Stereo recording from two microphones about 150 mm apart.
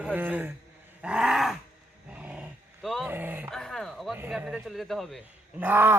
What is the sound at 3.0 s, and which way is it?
Speech, 10° right (ahead or behind).